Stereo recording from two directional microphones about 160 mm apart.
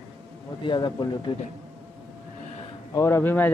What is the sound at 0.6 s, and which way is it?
Speech, 30° left (ahead or behind).